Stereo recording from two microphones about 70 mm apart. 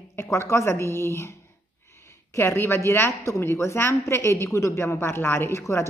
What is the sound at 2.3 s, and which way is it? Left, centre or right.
A woman's voice, left.